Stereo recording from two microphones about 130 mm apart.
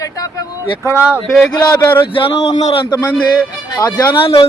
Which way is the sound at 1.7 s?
15° left (ahead or behind).